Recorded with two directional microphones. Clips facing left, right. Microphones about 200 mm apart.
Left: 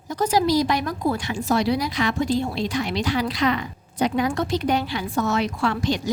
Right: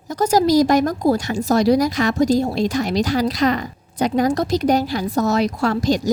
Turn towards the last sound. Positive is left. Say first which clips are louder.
# right 5 dB
turn(degrees=-40)  # may be behind; listen again after turning